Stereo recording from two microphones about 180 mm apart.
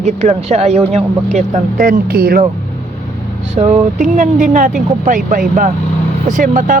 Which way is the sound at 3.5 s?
40° right (ahead or behind).